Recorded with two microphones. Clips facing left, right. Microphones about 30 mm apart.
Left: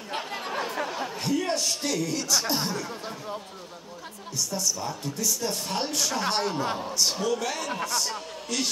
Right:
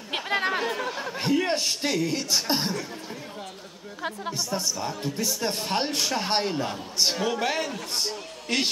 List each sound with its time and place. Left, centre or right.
0.1 s chatter: right
1.2 s speech: right
4.3 s speech: right